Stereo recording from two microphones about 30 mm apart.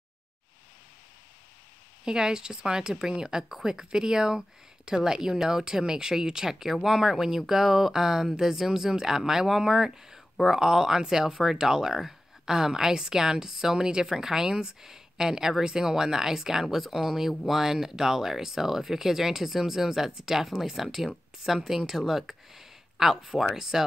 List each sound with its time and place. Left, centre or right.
2.0 s a woman's voice: right
14.0 s a woman's voice: centre